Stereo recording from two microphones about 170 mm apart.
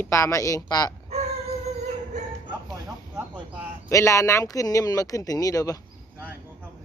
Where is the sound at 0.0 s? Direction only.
15° left (ahead or behind).